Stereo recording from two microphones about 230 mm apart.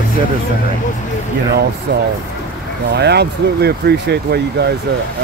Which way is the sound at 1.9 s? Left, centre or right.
Right.